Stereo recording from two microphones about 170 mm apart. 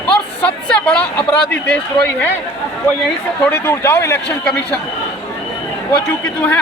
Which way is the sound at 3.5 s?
15° left (ahead or behind).